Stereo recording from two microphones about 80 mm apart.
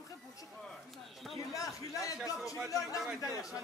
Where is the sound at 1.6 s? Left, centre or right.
Left.